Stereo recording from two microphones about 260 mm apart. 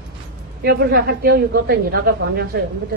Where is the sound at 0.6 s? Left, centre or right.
Right.